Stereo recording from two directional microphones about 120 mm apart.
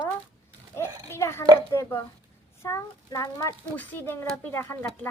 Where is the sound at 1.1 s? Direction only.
20° left (ahead or behind).